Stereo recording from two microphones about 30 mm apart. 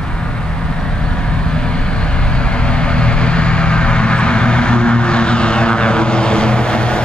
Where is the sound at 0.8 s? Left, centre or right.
Left.